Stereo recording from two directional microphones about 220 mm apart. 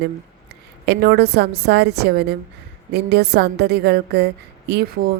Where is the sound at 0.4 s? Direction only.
50° right (ahead or behind).